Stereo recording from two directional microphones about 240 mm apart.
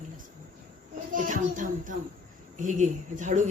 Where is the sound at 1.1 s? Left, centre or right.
Right.